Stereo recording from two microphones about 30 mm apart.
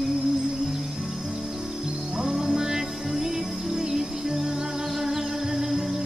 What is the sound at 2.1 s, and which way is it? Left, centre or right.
Music, centre.